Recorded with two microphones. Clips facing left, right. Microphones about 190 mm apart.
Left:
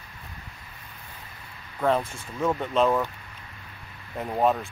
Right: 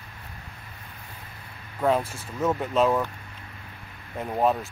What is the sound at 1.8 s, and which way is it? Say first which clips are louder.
Speech: right 1 dB; 5° right (ahead or behind).